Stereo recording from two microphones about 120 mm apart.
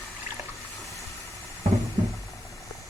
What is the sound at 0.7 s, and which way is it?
Hiss, centre (ahead or behind).